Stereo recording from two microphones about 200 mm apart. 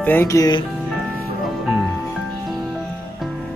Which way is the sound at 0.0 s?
10° left (ahead or behind).